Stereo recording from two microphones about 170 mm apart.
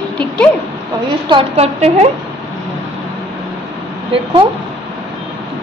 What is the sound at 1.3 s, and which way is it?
Speech, 35° right (ahead or behind).